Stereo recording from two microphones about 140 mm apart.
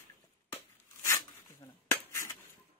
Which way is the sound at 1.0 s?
20° left (ahead or behind).